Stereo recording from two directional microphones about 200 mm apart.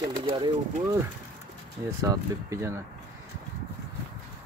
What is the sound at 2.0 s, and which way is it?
Speech, 15° right (ahead or behind).